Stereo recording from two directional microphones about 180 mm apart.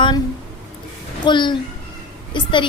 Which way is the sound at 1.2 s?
25° left (ahead or behind).